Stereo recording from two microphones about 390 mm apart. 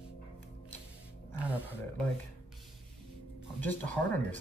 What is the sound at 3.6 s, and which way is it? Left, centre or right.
Speech, centre.